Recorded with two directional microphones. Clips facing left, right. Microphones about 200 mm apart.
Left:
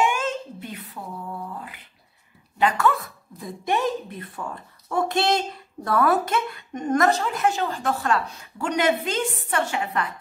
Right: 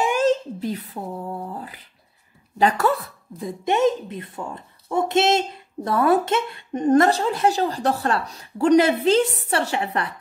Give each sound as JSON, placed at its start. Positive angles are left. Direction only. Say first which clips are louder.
{"t": 0.0, "sound": "a woman's voice", "louder": "right 5 dB", "side_deg": -35}
{"t": 3.3, "sound": "a woman's voice", "louder": "right 4 dB", "side_deg": -20}